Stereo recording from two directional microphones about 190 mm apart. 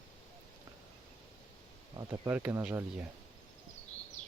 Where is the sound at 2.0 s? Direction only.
15° right (ahead or behind).